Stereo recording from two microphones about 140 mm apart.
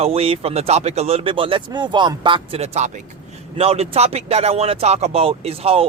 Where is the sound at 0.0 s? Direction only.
45° right (ahead or behind).